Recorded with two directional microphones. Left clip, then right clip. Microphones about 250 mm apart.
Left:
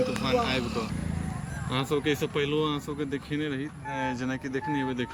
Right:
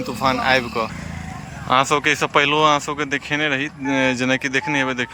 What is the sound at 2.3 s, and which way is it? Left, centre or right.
Speech, right.